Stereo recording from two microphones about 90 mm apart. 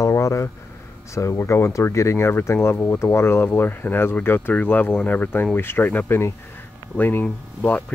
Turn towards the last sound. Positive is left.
turn(degrees=15)  # may be behind; listen again after turning